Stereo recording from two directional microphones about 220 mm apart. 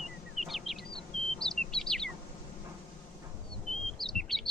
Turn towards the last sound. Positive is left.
turn(degrees=0)  # may be behind; listen again after turning